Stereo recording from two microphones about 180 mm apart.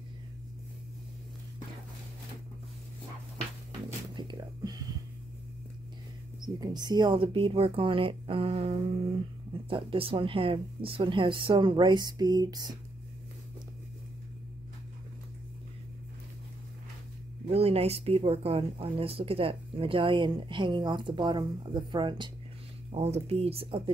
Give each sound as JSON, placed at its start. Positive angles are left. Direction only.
{"t": 4.1, "sound": "a sound", "side_deg": -25}
{"t": 6.4, "sound": "speech", "side_deg": -25}
{"t": 17.5, "sound": "speech", "side_deg": -35}